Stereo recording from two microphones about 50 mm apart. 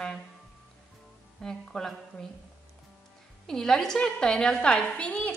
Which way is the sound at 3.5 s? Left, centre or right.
Centre.